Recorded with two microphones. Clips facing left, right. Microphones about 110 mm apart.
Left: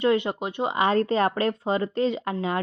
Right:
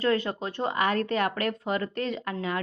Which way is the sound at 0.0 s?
25° left (ahead or behind).